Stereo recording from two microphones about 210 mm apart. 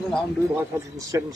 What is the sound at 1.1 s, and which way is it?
Speech, 15° right (ahead or behind).